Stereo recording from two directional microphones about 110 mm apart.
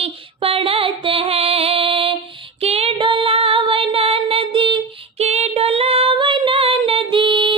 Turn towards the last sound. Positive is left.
turn(degrees=-50)  # may be behind; listen again after turning